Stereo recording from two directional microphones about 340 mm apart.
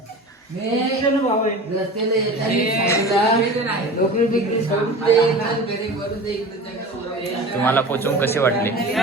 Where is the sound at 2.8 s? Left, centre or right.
Centre.